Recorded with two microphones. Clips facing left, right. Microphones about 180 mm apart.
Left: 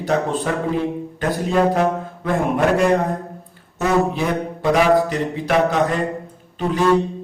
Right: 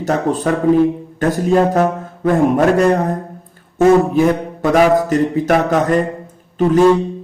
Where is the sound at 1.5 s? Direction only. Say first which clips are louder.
Right 3 dB; 45° right (ahead or behind).